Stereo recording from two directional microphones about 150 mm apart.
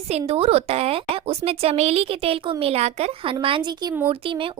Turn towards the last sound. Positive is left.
turn(degrees=-35)  # may be behind; listen again after turning